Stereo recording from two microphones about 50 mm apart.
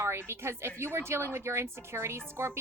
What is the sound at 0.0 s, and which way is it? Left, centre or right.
A woman's voice, right.